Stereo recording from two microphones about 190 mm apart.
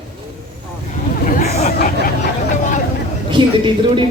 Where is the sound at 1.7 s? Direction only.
50° left (ahead or behind).